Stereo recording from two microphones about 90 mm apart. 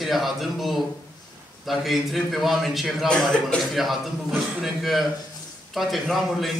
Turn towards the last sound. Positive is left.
turn(degrees=0)  # may be behind; listen again after turning